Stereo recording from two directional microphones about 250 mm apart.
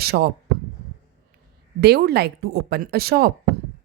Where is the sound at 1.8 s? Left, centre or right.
Right.